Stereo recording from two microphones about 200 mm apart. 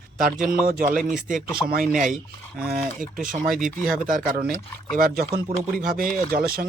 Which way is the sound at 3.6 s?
40° right (ahead or behind).